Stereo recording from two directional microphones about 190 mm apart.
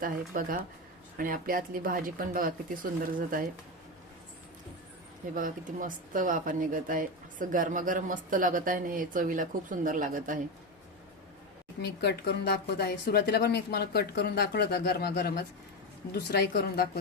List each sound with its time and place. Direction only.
0.0 s speech: 45° right (ahead or behind)
5.3 s speech: 45° right (ahead or behind)
11.8 s speech: 60° left (ahead or behind)